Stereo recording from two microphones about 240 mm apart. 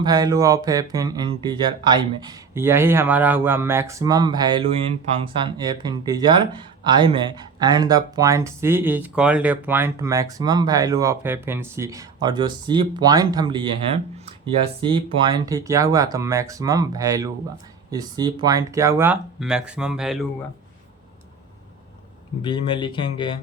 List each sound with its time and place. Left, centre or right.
0.0 s speech: centre
22.4 s speech: centre